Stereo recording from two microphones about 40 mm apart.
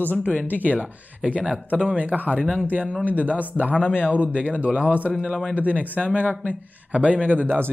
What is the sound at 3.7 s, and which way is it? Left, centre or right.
Speech, right.